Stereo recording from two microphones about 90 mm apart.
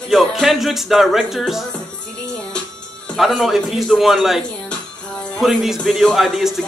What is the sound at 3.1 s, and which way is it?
Speech, centre (ahead or behind).